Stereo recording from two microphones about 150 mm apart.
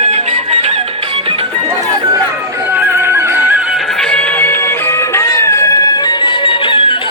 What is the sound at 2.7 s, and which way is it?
Music, 15° right (ahead or behind).